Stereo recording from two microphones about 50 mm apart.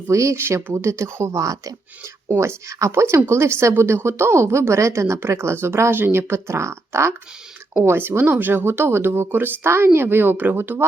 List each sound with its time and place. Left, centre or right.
0.1 s speech: right
0.3 s speech: right
3.2 s speech: right
4.7 s speech: right
5.9 s speech: right
7.9 s speech: right
9.6 s speech: right